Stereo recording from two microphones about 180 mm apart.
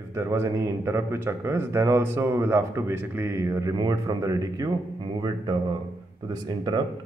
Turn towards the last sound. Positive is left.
turn(degrees=-25)  # may be behind; listen again after turning